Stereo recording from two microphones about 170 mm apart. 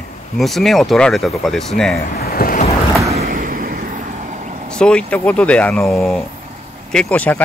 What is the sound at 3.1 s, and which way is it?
Vehicle, 60° right (ahead or behind).